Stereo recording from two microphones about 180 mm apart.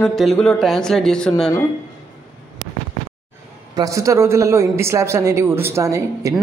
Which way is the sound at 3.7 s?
20° right (ahead or behind).